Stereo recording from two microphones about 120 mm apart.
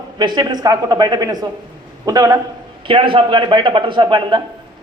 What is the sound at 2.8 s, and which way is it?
Speech, 45° right (ahead or behind).